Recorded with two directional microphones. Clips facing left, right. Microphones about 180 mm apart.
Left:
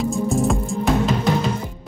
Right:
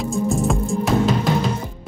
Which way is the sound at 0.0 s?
Centre (ahead or behind).